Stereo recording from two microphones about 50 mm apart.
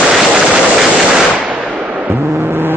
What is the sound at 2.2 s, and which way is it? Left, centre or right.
Vehicle, right.